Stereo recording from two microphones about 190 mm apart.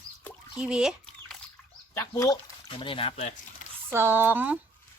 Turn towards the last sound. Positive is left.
turn(degrees=-10)  # may be behind; listen again after turning